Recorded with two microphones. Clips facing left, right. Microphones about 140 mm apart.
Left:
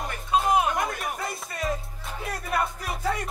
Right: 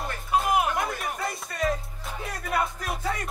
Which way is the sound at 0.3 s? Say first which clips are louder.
Left 1 dB; 25° left (ahead or behind).